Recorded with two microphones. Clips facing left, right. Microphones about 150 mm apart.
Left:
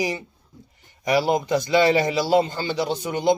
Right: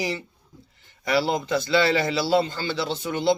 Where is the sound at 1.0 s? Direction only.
15° left (ahead or behind).